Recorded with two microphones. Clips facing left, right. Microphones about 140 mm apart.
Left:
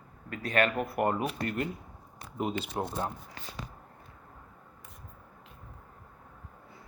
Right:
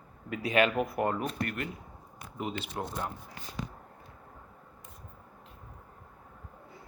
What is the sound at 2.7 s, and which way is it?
Speech, 25° left (ahead or behind).